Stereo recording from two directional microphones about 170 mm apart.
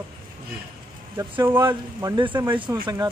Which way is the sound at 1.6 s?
25° right (ahead or behind).